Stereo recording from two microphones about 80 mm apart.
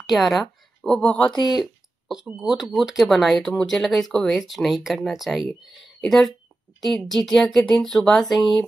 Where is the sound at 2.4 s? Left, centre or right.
Centre.